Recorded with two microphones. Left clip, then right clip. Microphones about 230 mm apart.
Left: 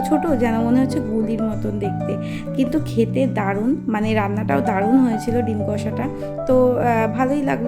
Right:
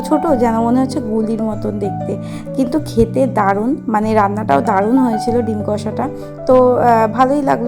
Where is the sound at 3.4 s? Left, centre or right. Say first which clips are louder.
Right 7 dB; centre.